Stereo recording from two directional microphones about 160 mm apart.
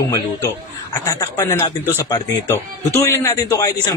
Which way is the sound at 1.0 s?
20° left (ahead or behind).